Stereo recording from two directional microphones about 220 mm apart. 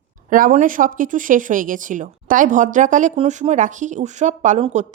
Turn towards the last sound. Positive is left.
turn(degrees=-35)  # may be behind; listen again after turning